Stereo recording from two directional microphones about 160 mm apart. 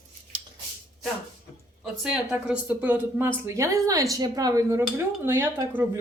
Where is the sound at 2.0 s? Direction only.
5° right (ahead or behind).